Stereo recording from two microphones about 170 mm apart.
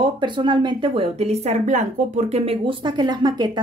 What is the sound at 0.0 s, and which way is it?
A woman's voice, 30° right (ahead or behind).